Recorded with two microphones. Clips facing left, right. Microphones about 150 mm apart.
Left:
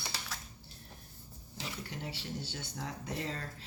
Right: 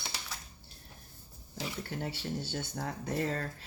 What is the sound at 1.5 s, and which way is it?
Speech, 50° right (ahead or behind).